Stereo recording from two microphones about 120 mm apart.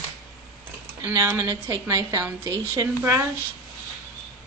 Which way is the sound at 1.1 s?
20° right (ahead or behind).